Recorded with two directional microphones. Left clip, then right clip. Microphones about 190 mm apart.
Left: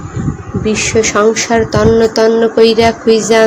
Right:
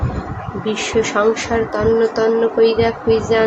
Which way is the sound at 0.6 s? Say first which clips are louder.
Left 6 dB; 30° left (ahead or behind).